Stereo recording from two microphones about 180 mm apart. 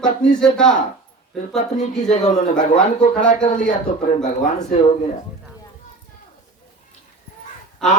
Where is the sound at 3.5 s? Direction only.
45° left (ahead or behind).